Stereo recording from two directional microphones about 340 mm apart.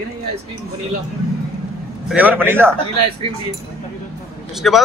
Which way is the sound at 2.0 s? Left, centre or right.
Centre.